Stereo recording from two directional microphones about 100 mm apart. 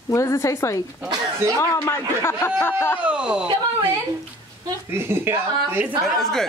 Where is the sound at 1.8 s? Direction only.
25° left (ahead or behind).